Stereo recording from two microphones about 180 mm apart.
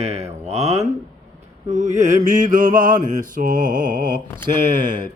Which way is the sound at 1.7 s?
40° right (ahead or behind).